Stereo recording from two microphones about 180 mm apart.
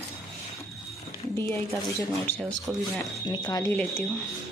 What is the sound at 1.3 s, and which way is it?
Speech, 15° left (ahead or behind).